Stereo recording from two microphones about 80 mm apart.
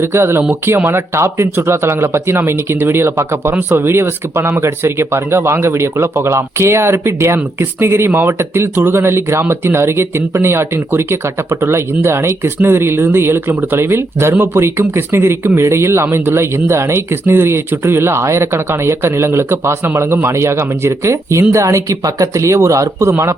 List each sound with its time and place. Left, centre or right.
0.0 s speech: right